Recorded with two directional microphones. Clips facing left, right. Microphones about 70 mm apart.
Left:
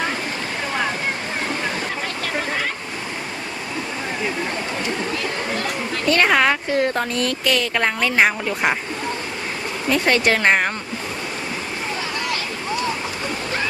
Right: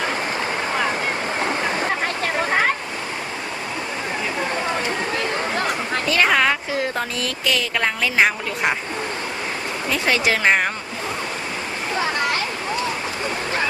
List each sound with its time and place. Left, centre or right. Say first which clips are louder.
2.2 s a sound: right 5 dB; right
5.1 s chatter: right 2 dB; right
6.1 s a woman's voice: left 2 dB; centre
9.9 s a woman's voice: left 3 dB; centre